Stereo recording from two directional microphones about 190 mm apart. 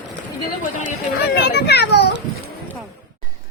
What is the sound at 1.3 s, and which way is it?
Speech, 60° left (ahead or behind).